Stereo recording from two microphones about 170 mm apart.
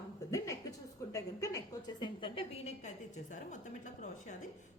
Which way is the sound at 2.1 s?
30° left (ahead or behind).